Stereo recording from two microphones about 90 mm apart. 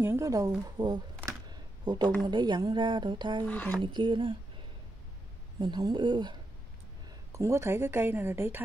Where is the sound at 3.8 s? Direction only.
60° right (ahead or behind).